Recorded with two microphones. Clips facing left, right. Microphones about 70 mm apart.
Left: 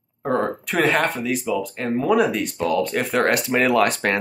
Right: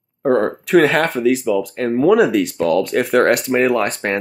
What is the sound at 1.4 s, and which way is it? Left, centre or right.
Speech, right.